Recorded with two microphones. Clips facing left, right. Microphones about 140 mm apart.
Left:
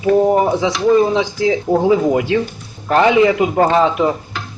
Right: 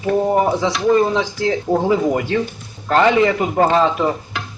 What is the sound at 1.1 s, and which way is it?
A man's voice, 15° left (ahead or behind).